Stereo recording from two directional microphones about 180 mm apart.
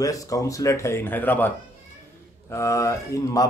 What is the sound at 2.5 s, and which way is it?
Speech, 15° left (ahead or behind).